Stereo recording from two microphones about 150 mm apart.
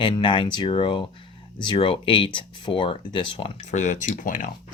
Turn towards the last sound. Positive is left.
turn(degrees=60)  # may be behind; listen again after turning